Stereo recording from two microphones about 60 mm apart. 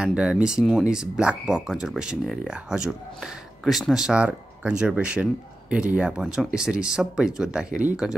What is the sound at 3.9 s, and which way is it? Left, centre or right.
Speech, centre.